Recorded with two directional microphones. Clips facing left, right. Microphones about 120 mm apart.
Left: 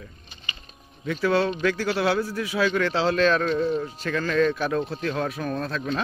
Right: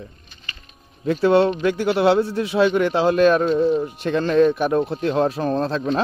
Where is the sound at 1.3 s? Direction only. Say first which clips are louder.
Right 5 dB; 20° right (ahead or behind).